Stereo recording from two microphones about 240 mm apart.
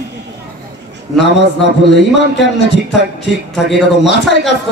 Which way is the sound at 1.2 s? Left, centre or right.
Left.